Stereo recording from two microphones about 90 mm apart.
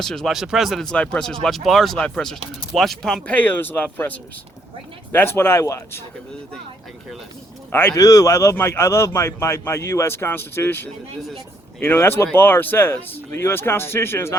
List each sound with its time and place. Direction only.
0.0 s speech: 5° left (ahead or behind)
3.3 s speech: 20° left (ahead or behind); by 6.0 s 35° left (ahead or behind)
7.7 s speech: 25° left (ahead or behind)
7.9 s a man's voice: 40° left (ahead or behind)